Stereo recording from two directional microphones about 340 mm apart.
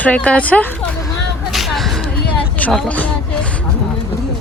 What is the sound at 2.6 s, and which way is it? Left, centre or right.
Speech, centre.